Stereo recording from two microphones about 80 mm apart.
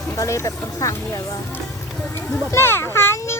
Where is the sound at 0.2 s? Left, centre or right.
Left.